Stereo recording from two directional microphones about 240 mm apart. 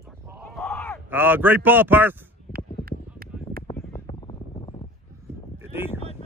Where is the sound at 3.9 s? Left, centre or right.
Left.